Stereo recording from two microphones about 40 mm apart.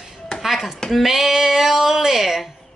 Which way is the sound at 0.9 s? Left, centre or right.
Centre.